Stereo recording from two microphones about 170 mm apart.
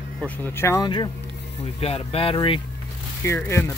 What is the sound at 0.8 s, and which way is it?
Speech, 25° left (ahead or behind).